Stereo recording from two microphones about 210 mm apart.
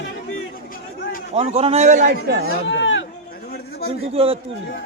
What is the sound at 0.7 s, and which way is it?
Chatter, 45° left (ahead or behind).